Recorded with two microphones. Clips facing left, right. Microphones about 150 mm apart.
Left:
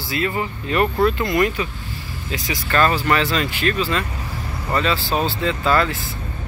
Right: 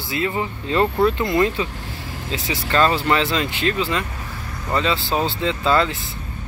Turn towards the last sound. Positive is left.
turn(degrees=-20)  # may be behind; listen again after turning